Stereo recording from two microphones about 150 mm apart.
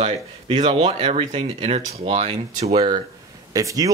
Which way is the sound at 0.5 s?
30° right (ahead or behind).